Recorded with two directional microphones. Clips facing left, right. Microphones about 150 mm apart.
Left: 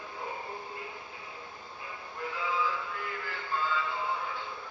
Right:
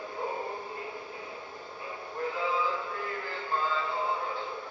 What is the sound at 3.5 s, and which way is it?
Synthetic singing, 35° right (ahead or behind).